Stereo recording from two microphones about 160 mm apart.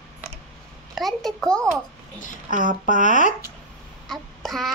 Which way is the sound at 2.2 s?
55° left (ahead or behind).